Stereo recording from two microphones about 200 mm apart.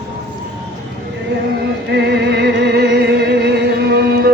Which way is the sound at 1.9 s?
60° right (ahead or behind).